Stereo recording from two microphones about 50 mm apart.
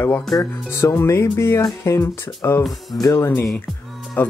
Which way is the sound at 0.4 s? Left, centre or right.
Left.